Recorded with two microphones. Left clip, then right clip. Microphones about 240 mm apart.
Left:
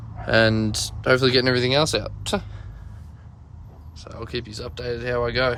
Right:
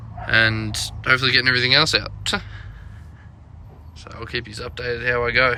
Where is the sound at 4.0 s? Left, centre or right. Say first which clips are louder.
Right 3 dB; centre.